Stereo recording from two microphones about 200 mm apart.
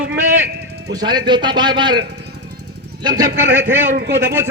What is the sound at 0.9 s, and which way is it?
A man's voice, 20° right (ahead or behind).